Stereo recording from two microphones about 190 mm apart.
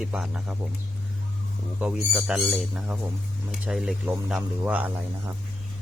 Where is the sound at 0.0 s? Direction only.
5° right (ahead or behind).